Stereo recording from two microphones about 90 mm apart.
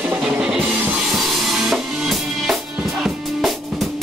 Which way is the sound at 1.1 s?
Centre (ahead or behind).